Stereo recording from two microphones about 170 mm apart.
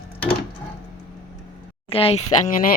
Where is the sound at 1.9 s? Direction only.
35° left (ahead or behind).